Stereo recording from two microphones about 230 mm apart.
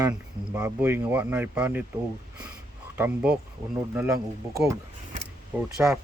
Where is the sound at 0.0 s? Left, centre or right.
Centre.